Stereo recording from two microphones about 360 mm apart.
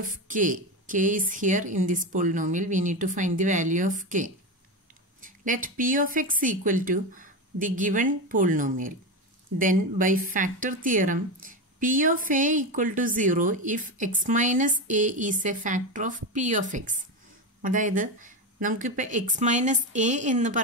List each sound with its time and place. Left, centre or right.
0.0 s speech: right